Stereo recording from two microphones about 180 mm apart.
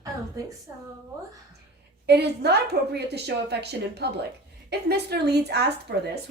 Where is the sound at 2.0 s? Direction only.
65° right (ahead or behind).